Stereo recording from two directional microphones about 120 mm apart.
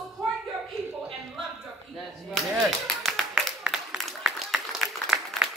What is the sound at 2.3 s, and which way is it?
Clapping, centre (ahead or behind).